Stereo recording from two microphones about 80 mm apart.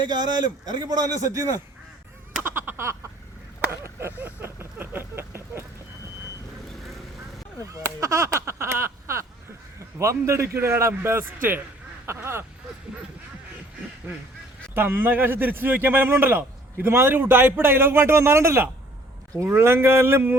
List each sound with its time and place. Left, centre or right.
0.1 s a man's voice: right
1.3 s speech: right
2.4 s a sound: right
4.2 s a sound: right
7.7 s a man's voice: right
14.8 s a man's voice: right